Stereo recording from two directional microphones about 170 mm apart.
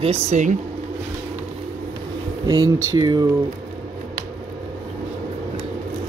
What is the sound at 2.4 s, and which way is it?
Speech, 25° right (ahead or behind).